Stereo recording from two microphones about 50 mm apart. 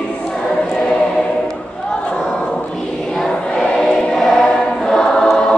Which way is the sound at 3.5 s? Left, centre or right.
Centre.